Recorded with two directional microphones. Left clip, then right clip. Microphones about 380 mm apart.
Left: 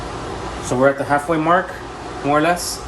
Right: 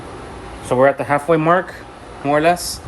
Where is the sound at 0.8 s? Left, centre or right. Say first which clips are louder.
Right 1 dB; right.